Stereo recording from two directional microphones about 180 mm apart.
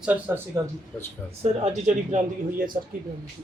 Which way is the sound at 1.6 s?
40° right (ahead or behind).